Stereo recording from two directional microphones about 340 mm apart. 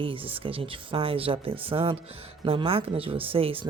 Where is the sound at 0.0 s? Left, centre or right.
Centre.